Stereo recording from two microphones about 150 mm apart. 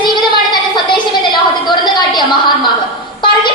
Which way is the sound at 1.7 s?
30° left (ahead or behind).